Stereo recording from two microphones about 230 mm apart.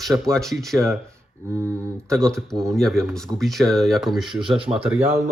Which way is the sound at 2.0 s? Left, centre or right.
Centre.